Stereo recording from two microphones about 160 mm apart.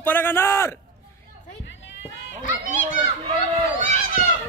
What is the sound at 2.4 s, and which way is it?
Children playing, 50° left (ahead or behind).